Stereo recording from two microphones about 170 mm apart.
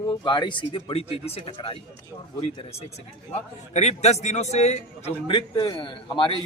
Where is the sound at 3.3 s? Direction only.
40° left (ahead or behind).